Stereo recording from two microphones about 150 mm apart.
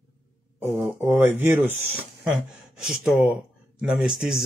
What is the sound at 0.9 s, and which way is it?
Speech, 15° right (ahead or behind).